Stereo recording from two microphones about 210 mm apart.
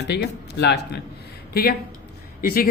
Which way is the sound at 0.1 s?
55° left (ahead or behind).